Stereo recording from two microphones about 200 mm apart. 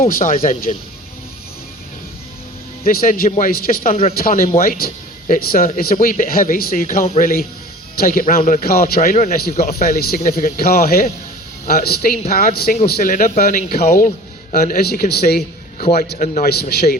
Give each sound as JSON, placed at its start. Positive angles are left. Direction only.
{"t": 0.0, "sound": "speech", "side_deg": 40}
{"t": 2.8, "sound": "speech", "side_deg": 45}
{"t": 9.7, "sound": "speech", "side_deg": 50}